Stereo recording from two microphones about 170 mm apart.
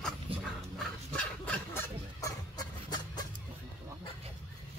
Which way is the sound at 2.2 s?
25° left (ahead or behind).